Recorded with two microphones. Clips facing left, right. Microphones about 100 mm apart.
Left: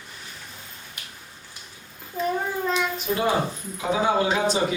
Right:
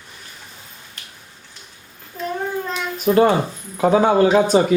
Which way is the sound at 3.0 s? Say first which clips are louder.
Right 12 dB; 55° right (ahead or behind).